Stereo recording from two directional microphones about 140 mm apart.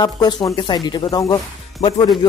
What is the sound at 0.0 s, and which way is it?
Speech, 30° left (ahead or behind).